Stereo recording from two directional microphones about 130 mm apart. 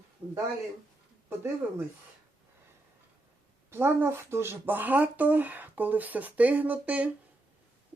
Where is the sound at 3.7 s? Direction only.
20° right (ahead or behind).